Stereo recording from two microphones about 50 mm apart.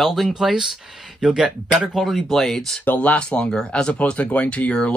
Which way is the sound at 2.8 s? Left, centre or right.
Left.